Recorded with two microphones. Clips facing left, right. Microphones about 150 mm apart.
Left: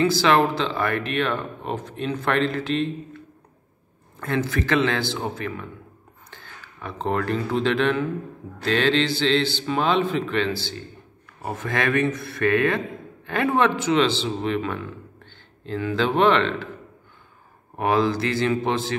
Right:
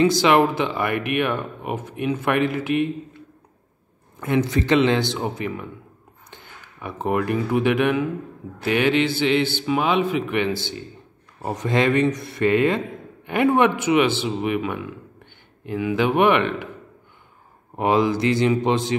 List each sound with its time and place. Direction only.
0.0 s a man's voice: 20° right (ahead or behind)
4.2 s a man's voice: 15° right (ahead or behind)
17.7 s a man's voice: 20° right (ahead or behind)